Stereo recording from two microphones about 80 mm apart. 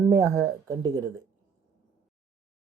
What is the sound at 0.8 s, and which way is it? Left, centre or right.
Speech, right.